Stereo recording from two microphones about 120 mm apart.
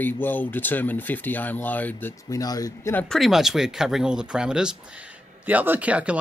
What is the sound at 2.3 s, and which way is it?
Speech, 30° left (ahead or behind).